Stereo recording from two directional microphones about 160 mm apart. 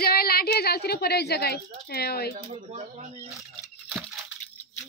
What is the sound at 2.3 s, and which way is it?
Speech, 45° right (ahead or behind).